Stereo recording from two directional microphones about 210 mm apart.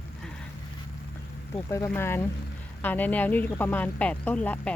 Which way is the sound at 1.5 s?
15° left (ahead or behind).